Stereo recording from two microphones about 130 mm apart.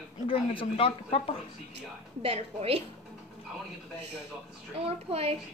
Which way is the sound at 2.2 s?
55° right (ahead or behind).